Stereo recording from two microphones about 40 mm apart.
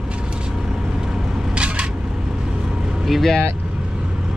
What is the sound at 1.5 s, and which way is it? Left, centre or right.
Single-lens reflex camera, right.